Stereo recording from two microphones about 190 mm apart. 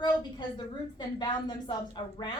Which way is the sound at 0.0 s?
25° left (ahead or behind).